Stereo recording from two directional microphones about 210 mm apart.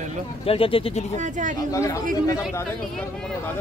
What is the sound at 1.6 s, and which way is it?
Speech, 15° left (ahead or behind).